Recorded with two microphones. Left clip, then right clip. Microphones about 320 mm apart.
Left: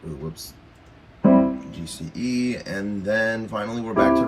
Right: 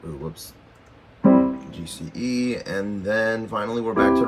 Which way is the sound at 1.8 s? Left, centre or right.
Centre.